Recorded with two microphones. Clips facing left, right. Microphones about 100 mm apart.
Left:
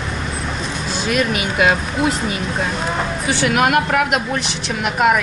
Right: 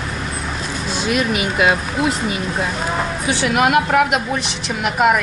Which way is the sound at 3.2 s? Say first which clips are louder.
Even; centre (ahead or behind).